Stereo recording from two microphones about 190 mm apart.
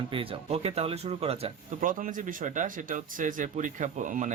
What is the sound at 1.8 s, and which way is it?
Speech, 45° right (ahead or behind).